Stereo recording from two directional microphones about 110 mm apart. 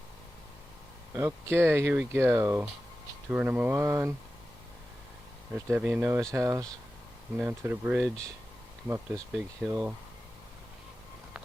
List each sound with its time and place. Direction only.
1.1 s speech: 25° right (ahead or behind)
5.5 s speech: 25° right (ahead or behind)
7.3 s speech: 15° right (ahead or behind)
7.9 s speech: centre (ahead or behind)
9.6 s speech: 15° right (ahead or behind)